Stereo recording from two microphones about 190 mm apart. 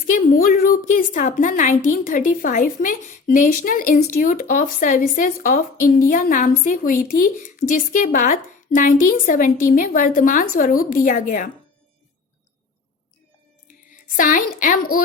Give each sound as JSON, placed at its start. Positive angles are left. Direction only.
{"t": 0.1, "sound": "speech", "side_deg": 50}
{"t": 14.2, "sound": "speech", "side_deg": 45}